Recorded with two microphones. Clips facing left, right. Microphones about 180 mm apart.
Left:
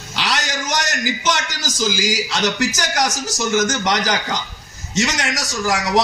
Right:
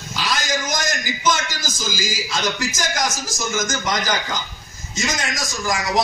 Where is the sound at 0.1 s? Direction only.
70° left (ahead or behind).